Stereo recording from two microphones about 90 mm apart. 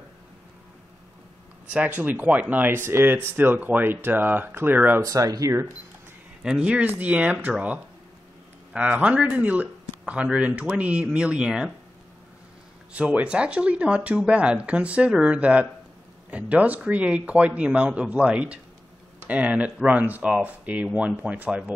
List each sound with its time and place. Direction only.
1.7 s speech: 20° right (ahead or behind)
5.0 s speech: 40° right (ahead or behind)
6.4 s speech: 10° right (ahead or behind)
12.9 s speech: 15° right (ahead or behind)